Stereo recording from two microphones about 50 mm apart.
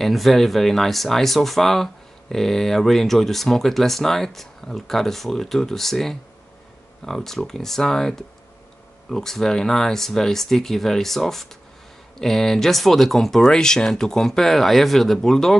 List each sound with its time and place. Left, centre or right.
0.0 s speech: centre